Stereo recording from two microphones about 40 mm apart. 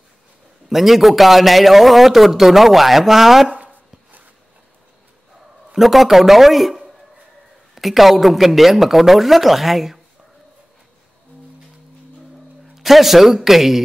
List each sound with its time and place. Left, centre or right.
0.7 s a man's voice: centre
3.5 s chopping: right
5.7 s a man's voice: centre
12.7 s a man's voice: centre